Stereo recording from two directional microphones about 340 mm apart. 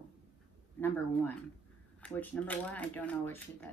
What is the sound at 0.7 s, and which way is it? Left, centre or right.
A woman's voice, centre.